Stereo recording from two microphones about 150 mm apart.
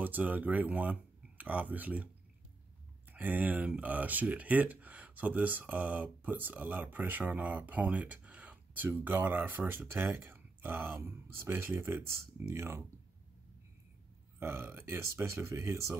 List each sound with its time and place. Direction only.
0.0 s speech: 10° right (ahead or behind)
3.1 s speech: 10° right (ahead or behind)
14.4 s speech: 15° right (ahead or behind)